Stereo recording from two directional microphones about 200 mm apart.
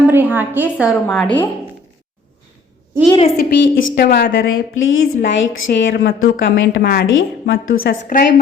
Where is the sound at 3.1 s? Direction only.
30° left (ahead or behind).